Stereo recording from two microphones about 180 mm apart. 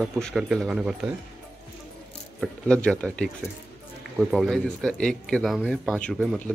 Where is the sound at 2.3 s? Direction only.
5° left (ahead or behind).